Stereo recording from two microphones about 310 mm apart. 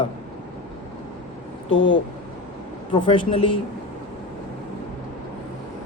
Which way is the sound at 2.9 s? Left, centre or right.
Centre.